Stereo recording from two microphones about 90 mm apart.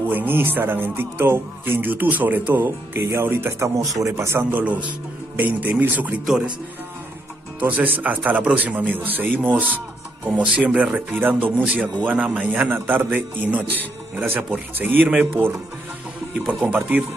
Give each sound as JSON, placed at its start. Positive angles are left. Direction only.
{"t": 0.1, "sound": "speech", "side_deg": -20}
{"t": 6.2, "sound": "speech", "side_deg": -5}
{"t": 7.6, "sound": "speech", "side_deg": -20}
{"t": 16.3, "sound": "speech", "side_deg": 5}
{"t": 16.6, "sound": "speech", "side_deg": -15}